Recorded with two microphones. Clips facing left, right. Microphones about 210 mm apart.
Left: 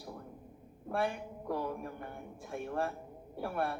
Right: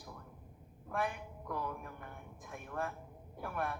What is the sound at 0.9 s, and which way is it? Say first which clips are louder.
A man's voice: left 4 dB; 30° left (ahead or behind).